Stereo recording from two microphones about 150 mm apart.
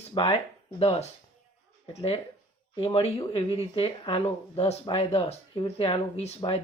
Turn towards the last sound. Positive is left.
turn(degrees=35)  # may be behind; listen again after turning